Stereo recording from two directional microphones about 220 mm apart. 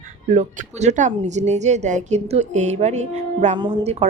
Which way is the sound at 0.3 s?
30° right (ahead or behind).